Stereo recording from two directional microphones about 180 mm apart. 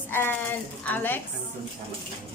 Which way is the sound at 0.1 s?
10° left (ahead or behind).